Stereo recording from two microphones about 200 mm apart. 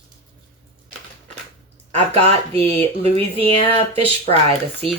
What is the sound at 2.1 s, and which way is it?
Speech, 30° right (ahead or behind).